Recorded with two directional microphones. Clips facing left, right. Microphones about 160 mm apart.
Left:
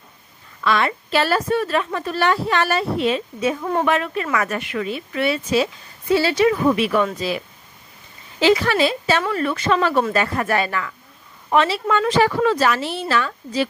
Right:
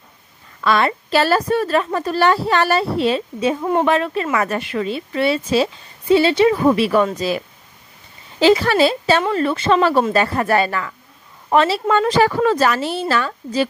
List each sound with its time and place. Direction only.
0.7 s a woman's voice: 40° right (ahead or behind)